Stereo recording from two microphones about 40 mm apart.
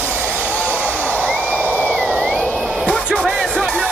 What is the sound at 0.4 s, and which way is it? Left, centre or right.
Hair dryer, left.